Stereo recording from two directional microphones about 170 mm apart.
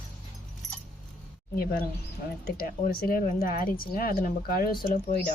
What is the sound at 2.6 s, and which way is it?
Speech, 60° left (ahead or behind).